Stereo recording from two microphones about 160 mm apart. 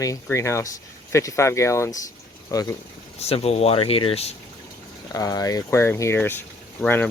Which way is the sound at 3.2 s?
40° left (ahead or behind).